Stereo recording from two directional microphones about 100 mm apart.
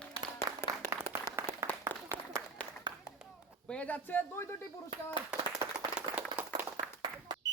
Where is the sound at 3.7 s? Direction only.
15° left (ahead or behind).